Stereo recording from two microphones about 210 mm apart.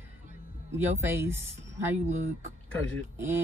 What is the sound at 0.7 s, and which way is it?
Speech, 10° right (ahead or behind).